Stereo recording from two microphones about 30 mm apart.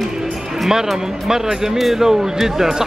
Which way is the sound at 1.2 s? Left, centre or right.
Centre.